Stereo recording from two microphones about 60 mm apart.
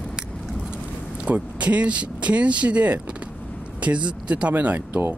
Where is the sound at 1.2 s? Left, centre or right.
Right.